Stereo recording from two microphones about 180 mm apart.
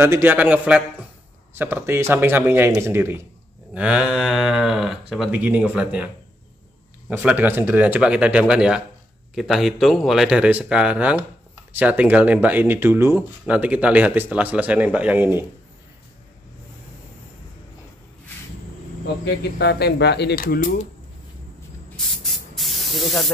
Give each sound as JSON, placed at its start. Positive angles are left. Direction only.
{"t": 0.0, "sound": "speech", "side_deg": -15}
{"t": 7.1, "sound": "speech", "side_deg": -10}
{"t": 19.2, "sound": "speech", "side_deg": 70}
{"t": 21.9, "sound": "spray", "side_deg": 0}